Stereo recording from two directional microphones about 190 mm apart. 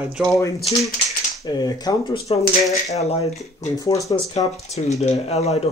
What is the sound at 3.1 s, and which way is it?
Speech, 35° left (ahead or behind).